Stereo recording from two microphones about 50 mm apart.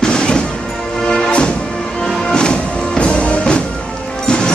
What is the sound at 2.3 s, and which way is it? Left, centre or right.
Music, centre.